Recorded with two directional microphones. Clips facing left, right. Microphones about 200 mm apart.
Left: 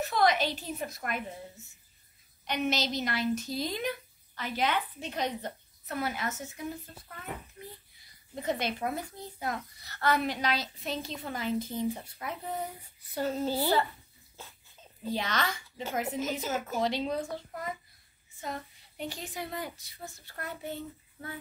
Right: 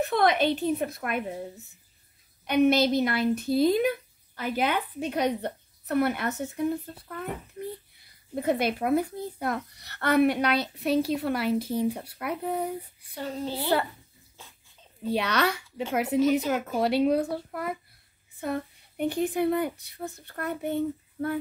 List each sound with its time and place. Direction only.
0.0 s speech: 55° right (ahead or behind)
2.4 s speech: 55° right (ahead or behind)
13.1 s a child's voice: 5° left (ahead or behind)
15.0 s speech: 65° right (ahead or behind)